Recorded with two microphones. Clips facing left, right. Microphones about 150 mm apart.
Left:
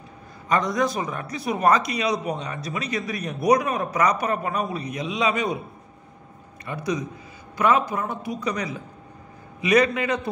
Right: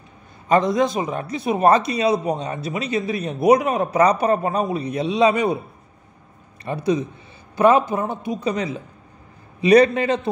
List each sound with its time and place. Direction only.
0.5 s a man's voice: 25° right (ahead or behind)
6.6 s a man's voice: 30° right (ahead or behind)